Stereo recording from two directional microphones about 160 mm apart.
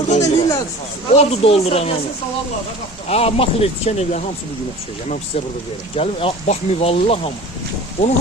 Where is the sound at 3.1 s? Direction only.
40° left (ahead or behind).